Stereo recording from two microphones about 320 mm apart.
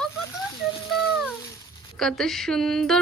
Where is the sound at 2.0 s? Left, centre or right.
Centre.